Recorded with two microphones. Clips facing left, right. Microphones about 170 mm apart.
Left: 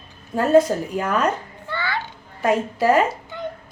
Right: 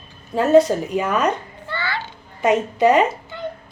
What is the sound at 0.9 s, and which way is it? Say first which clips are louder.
Speech: right 2 dB; 10° right (ahead or behind).